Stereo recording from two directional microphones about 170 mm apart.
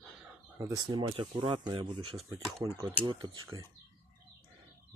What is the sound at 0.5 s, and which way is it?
Speech, 20° right (ahead or behind).